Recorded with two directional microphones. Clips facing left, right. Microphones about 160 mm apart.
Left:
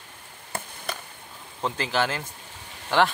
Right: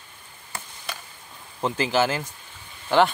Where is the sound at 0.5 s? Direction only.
55° left (ahead or behind).